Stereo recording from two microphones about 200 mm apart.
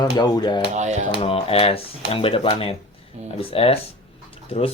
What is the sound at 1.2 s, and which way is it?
Speech, 30° left (ahead or behind).